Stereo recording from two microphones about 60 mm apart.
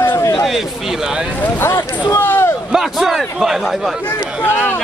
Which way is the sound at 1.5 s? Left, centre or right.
Left.